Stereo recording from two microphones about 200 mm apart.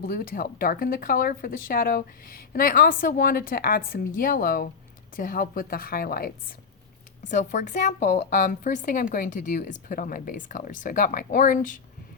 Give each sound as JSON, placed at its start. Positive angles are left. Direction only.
{"t": 0.0, "sound": "a woman's voice", "side_deg": 45}